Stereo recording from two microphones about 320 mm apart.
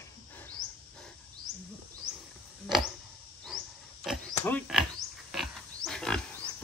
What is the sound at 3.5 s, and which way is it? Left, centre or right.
Pig, centre.